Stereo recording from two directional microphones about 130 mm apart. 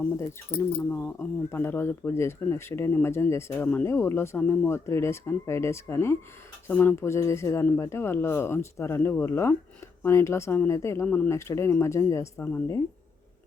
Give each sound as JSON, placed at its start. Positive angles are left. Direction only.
{"t": 0.8, "sound": "speech", "side_deg": 10}